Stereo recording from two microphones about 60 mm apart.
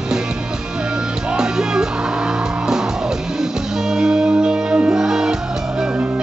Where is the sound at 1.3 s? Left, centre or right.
Centre.